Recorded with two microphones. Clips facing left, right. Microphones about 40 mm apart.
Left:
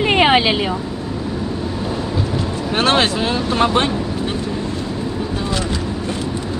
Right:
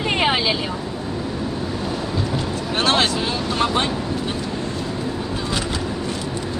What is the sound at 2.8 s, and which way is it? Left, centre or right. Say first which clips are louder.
Vehicle: left 3 dB; left.